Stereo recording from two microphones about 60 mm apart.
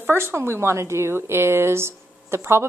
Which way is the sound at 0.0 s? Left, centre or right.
Right.